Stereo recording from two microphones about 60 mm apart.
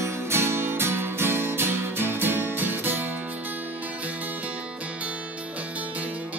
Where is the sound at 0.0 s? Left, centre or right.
Right.